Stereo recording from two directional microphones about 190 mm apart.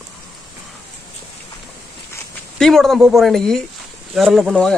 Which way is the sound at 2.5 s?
Centre (ahead or behind).